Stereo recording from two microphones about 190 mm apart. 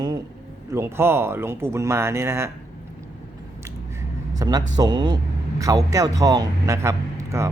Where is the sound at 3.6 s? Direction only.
15° right (ahead or behind).